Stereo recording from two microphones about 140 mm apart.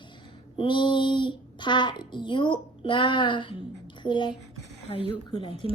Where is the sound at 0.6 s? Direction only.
35° left (ahead or behind).